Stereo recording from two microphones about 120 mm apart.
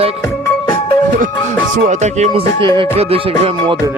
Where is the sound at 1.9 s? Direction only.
75° right (ahead or behind).